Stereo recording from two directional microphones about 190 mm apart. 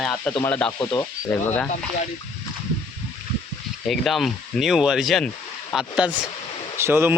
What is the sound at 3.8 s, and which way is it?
Speech, centre (ahead or behind).